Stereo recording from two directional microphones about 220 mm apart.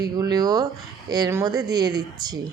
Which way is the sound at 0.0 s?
15° right (ahead or behind).